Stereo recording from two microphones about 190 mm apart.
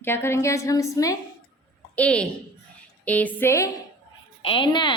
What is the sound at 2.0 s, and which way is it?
A woman's voice, 5° left (ahead or behind).